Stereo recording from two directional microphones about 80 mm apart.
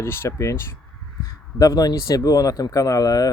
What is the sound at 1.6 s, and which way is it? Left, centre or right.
Speech, left.